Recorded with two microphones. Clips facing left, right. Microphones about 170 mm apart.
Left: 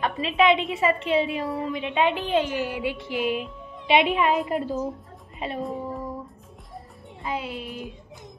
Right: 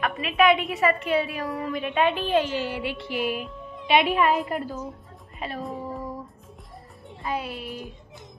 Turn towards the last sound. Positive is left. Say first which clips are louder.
# even
turn(degrees=20)  # may be behind; listen again after turning